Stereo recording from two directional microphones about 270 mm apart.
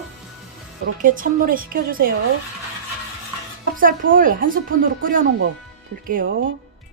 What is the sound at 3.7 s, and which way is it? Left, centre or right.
Speech, right.